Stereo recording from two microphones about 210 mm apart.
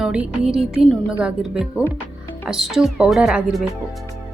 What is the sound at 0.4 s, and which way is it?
Speech, centre (ahead or behind).